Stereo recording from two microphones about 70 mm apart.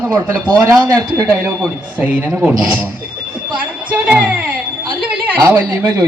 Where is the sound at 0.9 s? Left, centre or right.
Right; by 2.6 s centre.